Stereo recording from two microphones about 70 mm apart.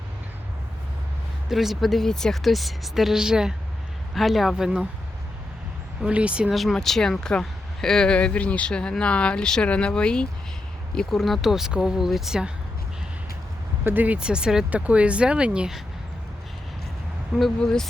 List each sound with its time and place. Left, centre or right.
1.5 s speech: centre
6.0 s speech: centre
6.5 s speech: centre
13.8 s speech: right
14.2 s speech: centre
17.6 s speech: centre